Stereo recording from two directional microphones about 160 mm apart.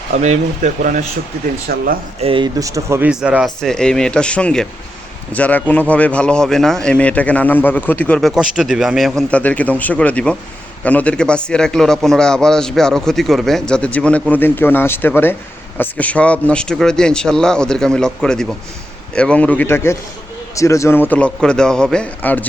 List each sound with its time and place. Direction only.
0.1 s speech: 45° right (ahead or behind)
1.7 s speech: 70° right (ahead or behind)
2.2 s speech: 35° right (ahead or behind)
2.6 s speech: 20° right (ahead or behind)
3.1 s a man's voice: 5° right (ahead or behind)
8.4 s a man's voice: 5° right (ahead or behind)